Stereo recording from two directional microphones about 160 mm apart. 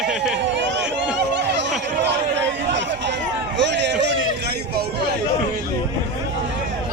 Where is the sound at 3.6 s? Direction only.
90° right.